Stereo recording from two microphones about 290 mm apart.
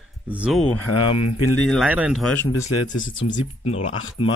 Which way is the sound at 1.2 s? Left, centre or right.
Left.